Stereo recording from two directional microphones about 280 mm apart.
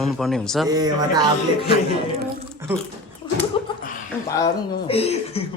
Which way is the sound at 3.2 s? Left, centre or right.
Centre.